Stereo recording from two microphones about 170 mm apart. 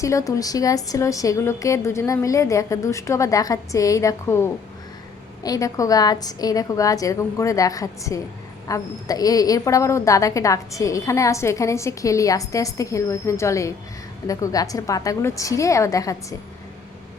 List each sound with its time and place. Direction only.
0.0 s a woman's voice: 20° left (ahead or behind)